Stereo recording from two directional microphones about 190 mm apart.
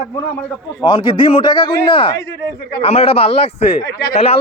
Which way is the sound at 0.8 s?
25° left (ahead or behind).